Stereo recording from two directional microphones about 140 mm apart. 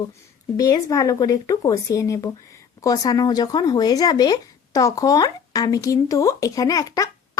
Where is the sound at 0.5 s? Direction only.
25° left (ahead or behind).